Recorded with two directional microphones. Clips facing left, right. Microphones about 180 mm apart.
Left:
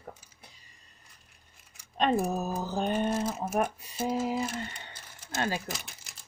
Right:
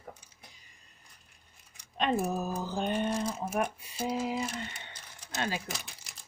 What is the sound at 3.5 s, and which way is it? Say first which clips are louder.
Speech: left 3 dB; 45° left (ahead or behind).